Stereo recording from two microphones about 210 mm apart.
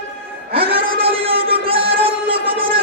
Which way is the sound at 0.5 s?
25° right (ahead or behind).